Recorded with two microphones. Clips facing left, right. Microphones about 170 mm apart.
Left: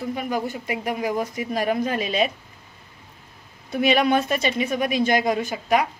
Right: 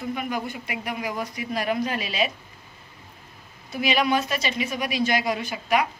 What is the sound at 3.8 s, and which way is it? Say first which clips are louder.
A woman's voice: left 4 dB; 55° left (ahead or behind).